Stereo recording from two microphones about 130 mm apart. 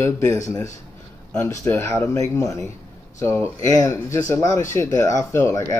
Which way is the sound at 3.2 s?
20° left (ahead or behind).